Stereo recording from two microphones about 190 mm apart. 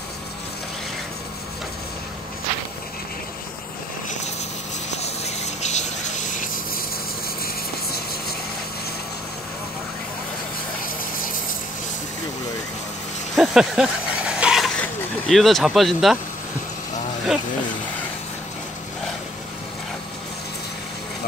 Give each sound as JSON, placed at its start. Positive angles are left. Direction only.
{"t": 4.9, "sound": "rub", "side_deg": 35}
{"t": 13.4, "sound": "vehicle", "side_deg": -5}